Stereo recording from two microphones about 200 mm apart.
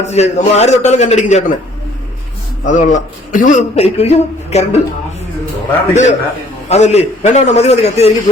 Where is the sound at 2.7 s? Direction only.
40° left (ahead or behind).